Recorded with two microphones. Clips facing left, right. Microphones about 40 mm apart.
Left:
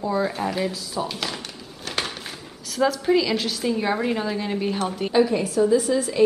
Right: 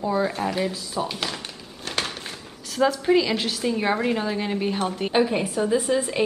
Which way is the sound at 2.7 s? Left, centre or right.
Centre.